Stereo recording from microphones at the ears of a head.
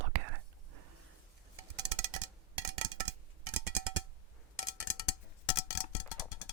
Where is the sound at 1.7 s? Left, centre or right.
Right.